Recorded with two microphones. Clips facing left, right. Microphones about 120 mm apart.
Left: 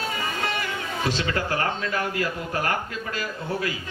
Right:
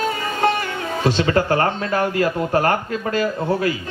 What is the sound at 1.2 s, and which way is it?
A man's voice, 45° right (ahead or behind).